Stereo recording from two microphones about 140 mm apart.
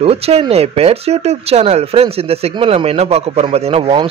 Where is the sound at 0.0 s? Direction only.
45° right (ahead or behind).